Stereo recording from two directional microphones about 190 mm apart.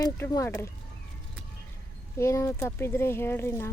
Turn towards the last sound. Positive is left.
turn(degrees=15)  # may be behind; listen again after turning